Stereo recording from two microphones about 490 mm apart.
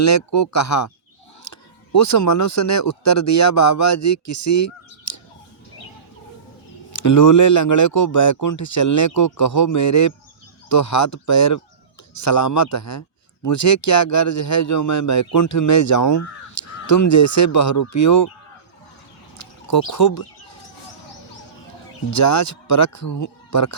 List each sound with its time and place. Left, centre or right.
0.0 s a man's voice: left
6.9 s a man's voice: left
19.4 s speech: left
22.1 s a man's voice: left